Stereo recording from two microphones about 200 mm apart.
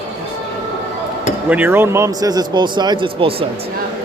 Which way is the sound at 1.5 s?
10° right (ahead or behind).